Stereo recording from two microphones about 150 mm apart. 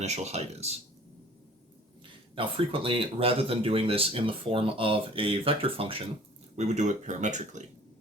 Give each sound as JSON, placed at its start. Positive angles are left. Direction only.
{"t": 0.0, "sound": "speech", "side_deg": -45}
{"t": 2.3, "sound": "speech", "side_deg": -35}
{"t": 6.6, "sound": "speech", "side_deg": -50}